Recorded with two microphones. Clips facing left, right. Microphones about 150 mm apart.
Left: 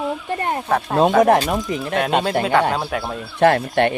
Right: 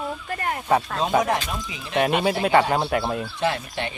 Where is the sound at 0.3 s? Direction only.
25° left (ahead or behind).